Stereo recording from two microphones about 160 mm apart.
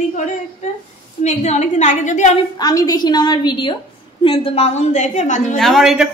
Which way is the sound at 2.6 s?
25° left (ahead or behind).